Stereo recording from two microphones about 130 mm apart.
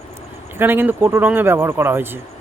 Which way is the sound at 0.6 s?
15° right (ahead or behind).